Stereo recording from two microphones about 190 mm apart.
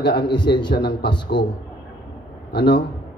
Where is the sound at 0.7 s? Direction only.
60° left (ahead or behind).